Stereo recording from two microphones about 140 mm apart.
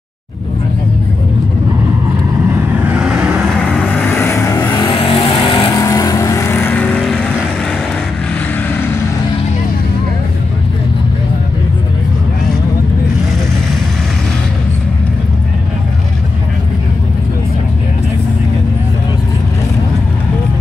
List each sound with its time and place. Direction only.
2.4 s vehicle: 10° right (ahead or behind)
3.6 s vehicle: 5° left (ahead or behind); by 5.7 s 35° left (ahead or behind)
5.7 s vehicle: 25° left (ahead or behind); by 7.2 s 5° left (ahead or behind)